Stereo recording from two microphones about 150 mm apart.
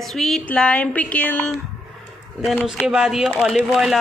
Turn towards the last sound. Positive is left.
turn(degrees=0)  # may be behind; listen again after turning